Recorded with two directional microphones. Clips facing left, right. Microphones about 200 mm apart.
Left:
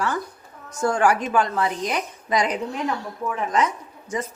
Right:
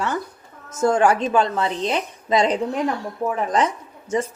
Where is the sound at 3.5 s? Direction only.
30° right (ahead or behind).